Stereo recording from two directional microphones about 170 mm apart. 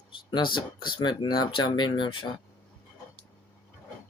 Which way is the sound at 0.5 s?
25° left (ahead or behind).